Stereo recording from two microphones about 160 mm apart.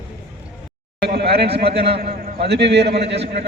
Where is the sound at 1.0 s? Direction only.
85° right.